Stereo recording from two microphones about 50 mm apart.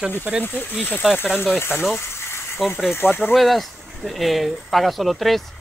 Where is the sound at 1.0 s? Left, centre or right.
Centre.